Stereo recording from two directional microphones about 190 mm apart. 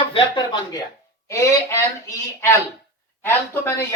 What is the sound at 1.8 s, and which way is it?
Speech, 15° left (ahead or behind).